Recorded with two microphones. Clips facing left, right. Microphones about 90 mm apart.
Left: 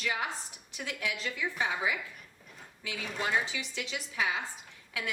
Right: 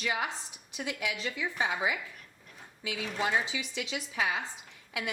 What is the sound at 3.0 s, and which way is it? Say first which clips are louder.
Speech: right 2 dB; centre (ahead or behind).